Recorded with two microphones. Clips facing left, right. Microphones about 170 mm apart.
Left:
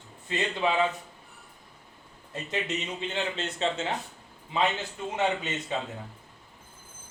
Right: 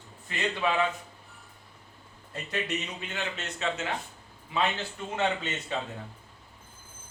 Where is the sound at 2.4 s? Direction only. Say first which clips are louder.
Left 1 dB; 25° left (ahead or behind).